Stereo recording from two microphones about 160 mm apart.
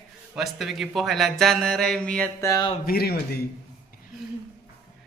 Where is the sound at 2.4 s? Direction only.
20° left (ahead or behind).